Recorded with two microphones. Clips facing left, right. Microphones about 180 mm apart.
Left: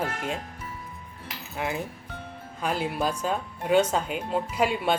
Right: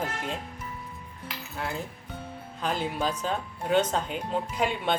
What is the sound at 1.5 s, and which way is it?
Speech, 15° left (ahead or behind).